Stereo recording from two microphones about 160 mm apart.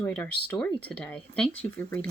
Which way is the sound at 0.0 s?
15° left (ahead or behind).